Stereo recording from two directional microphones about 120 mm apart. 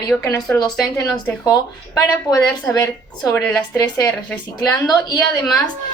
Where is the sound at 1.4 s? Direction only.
35° left (ahead or behind).